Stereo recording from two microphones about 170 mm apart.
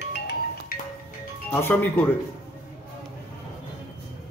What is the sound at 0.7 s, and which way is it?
Music, 60° left (ahead or behind).